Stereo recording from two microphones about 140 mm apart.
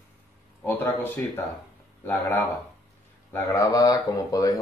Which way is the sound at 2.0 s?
15° left (ahead or behind).